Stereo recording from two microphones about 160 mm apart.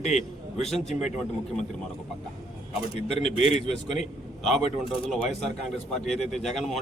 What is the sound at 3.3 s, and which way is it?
Speech, 40° left (ahead or behind).